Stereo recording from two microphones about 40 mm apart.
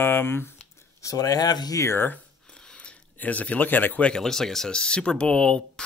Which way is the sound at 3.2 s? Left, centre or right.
Left.